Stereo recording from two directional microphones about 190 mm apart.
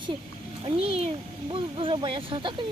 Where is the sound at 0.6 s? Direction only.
30° right (ahead or behind).